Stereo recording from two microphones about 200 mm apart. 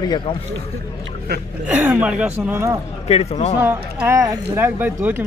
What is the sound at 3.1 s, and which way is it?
Speech, 35° left (ahead or behind).